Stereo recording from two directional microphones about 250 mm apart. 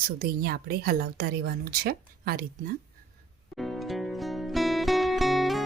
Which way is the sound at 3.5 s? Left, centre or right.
Centre.